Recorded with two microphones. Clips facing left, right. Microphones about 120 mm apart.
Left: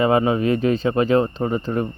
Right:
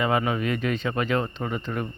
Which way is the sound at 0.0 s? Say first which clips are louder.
Left 7 dB; 30° left (ahead or behind).